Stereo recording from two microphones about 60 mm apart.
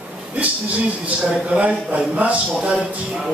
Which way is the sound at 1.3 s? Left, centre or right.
Right.